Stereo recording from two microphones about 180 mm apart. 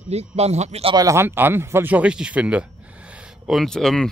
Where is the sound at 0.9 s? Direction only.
15° right (ahead or behind).